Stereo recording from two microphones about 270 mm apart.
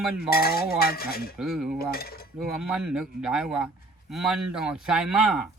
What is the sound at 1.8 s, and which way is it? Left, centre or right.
Cutlery, left.